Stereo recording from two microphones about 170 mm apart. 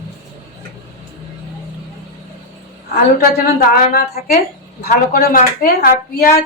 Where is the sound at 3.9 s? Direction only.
65° left (ahead or behind).